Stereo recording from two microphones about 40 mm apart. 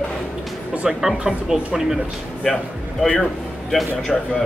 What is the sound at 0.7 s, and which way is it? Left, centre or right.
Speech, right.